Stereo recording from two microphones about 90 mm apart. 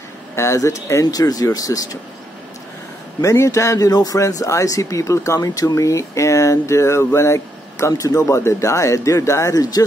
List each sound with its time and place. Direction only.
0.4 s speech: 35° left (ahead or behind)
3.2 s speech: 35° left (ahead or behind)